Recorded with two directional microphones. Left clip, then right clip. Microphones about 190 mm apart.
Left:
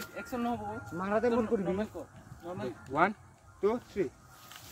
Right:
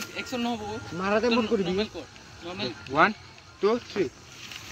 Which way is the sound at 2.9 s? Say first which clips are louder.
Right 7 dB; 40° right (ahead or behind).